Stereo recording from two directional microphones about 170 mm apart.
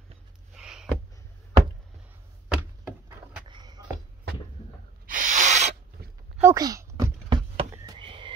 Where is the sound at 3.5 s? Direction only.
25° right (ahead or behind).